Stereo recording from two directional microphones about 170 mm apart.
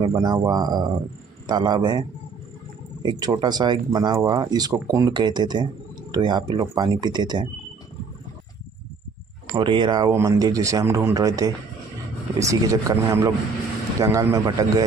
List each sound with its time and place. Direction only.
0.0 s speech: 25° right (ahead or behind)
9.5 s speech: 30° right (ahead or behind)